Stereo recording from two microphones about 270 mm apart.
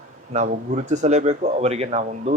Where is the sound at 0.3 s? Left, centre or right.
Right.